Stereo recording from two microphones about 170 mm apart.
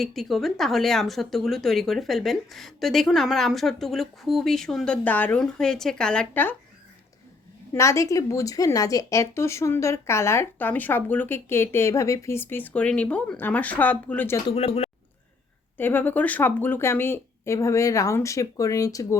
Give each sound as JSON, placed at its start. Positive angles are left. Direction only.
{"t": 0.0, "sound": "speech", "side_deg": 0}
{"t": 7.7, "sound": "a woman's voice", "side_deg": 15}
{"t": 14.4, "sound": "speech", "side_deg": 35}
{"t": 15.8, "sound": "a woman's voice", "side_deg": 10}